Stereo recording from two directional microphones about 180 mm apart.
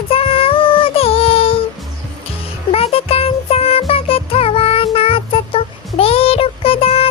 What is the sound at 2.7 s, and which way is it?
Music, 30° left (ahead or behind).